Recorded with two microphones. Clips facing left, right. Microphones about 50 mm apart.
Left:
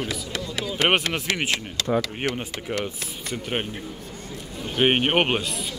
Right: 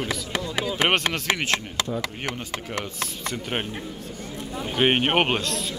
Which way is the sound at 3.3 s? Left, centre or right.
Centre.